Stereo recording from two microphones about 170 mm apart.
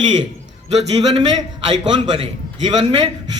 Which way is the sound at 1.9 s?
25° right (ahead or behind).